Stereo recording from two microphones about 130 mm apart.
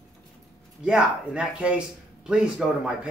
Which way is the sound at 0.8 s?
5° right (ahead or behind).